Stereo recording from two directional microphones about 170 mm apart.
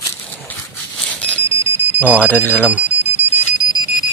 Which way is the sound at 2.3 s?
10° left (ahead or behind).